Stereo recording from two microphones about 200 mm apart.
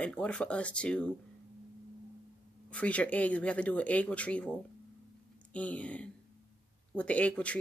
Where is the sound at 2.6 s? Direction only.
5° left (ahead or behind).